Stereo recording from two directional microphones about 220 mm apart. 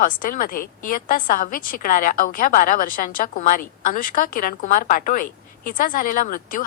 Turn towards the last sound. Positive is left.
turn(degrees=40)  # may be behind; listen again after turning